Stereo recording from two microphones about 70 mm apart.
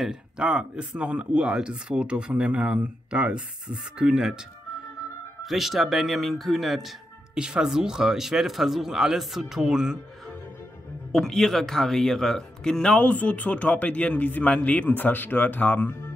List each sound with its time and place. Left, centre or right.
0.0 s speech: centre
7.3 s speech: centre
11.1 s speech: centre
12.9 s a man's voice: left